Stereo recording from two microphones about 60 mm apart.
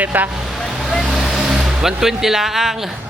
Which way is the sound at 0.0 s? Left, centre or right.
Right.